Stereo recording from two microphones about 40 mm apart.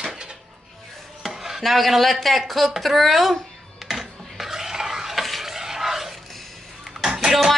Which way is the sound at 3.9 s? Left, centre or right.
Centre.